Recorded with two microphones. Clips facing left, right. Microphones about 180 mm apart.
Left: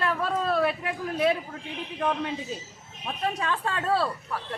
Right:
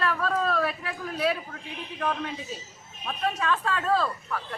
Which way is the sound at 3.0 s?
30° left (ahead or behind).